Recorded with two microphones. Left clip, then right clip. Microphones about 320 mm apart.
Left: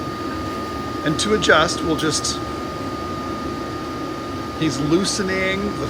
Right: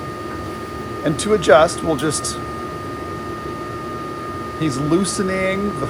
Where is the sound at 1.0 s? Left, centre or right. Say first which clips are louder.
Right 1 dB; centre.